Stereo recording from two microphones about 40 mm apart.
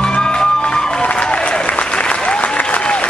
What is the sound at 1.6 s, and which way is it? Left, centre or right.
Applause, left.